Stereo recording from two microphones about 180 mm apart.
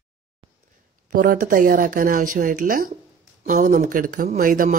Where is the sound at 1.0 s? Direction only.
50° right (ahead or behind).